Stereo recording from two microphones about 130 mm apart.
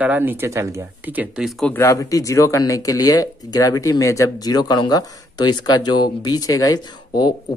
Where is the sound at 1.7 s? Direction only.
25° left (ahead or behind).